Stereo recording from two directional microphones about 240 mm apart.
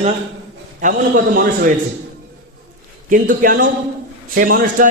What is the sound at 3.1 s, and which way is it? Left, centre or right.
A man's voice, right.